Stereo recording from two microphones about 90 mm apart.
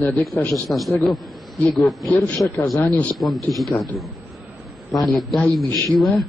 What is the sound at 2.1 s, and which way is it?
A man's voice, 20° left (ahead or behind).